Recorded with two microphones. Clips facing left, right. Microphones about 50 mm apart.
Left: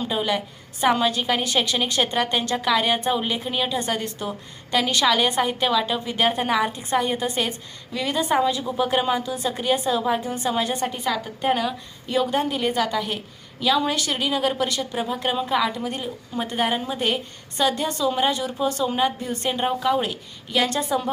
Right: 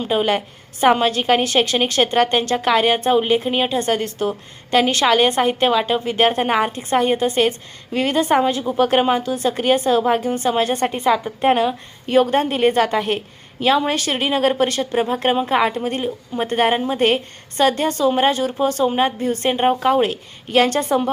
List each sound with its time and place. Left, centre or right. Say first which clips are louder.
0.0 s a woman's voice: right 5 dB; right
12.0 s a woman's voice: right 6 dB; right